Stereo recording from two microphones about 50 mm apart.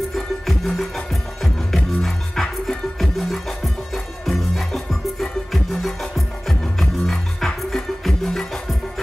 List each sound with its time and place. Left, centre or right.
0.1 s music: centre